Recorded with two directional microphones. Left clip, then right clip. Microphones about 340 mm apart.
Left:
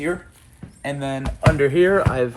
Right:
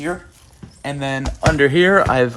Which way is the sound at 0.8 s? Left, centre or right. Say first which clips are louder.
Right 3 dB; right.